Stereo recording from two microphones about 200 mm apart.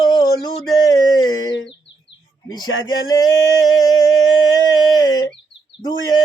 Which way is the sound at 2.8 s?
20° left (ahead or behind).